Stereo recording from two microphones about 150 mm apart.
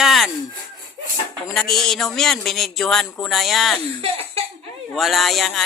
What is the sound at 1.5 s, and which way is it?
Speech, 5° left (ahead or behind).